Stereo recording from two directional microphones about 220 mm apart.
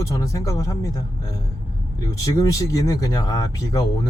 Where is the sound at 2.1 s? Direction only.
15° left (ahead or behind).